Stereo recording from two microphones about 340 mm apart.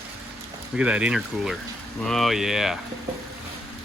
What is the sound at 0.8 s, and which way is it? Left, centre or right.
Speech, centre.